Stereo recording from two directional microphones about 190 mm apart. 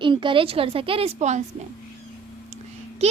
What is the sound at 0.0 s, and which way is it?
A woman's voice, 25° right (ahead or behind).